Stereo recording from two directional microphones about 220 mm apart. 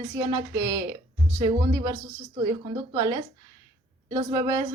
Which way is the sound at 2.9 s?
15° right (ahead or behind).